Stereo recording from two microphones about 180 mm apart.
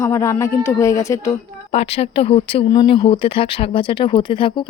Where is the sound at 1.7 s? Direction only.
35° left (ahead or behind).